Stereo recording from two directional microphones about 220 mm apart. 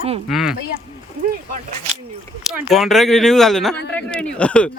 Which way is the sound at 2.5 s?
Centre (ahead or behind).